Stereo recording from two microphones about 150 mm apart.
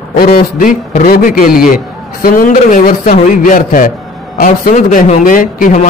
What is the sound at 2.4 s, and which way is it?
A man's voice, 60° left (ahead or behind).